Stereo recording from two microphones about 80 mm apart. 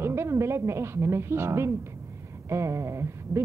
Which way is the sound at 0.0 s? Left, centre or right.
Right.